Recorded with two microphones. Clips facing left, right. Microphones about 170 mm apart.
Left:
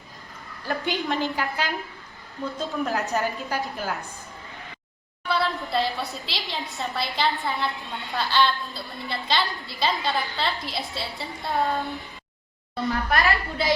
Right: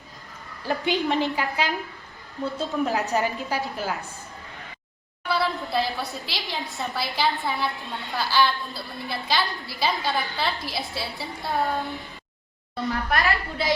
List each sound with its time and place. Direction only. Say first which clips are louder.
0.7 s a woman's voice: right 3 dB; centre (ahead or behind)
5.3 s a woman's voice: even; centre (ahead or behind)
12.9 s a woman's voice: left 1 dB; 35° left (ahead or behind)